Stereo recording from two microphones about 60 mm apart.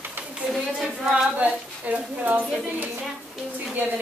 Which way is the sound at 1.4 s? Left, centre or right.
Right.